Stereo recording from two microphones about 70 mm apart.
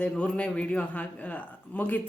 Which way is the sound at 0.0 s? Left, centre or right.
Centre.